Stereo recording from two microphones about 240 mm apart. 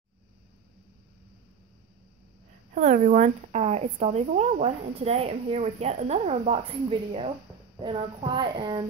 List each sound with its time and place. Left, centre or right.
2.7 s speech: right